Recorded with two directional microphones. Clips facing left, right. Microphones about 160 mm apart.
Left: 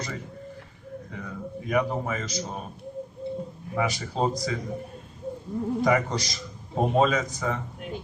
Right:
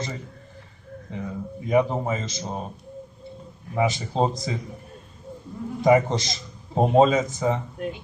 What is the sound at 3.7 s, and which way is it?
Speech, 25° right (ahead or behind).